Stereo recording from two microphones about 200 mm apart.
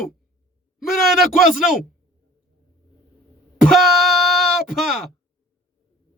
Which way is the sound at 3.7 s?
Centre (ahead or behind).